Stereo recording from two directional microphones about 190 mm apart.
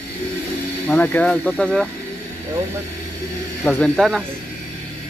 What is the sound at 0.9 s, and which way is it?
Speech, 10° left (ahead or behind).